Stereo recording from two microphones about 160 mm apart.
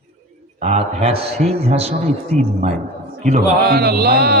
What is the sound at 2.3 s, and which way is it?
Speech, 5° left (ahead or behind).